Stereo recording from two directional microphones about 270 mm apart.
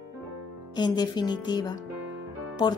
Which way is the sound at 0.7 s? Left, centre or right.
Centre.